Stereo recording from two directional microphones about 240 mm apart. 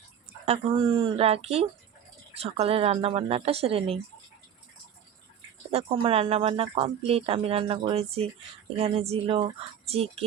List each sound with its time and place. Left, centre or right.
0.4 s speech: right
5.7 s speech: right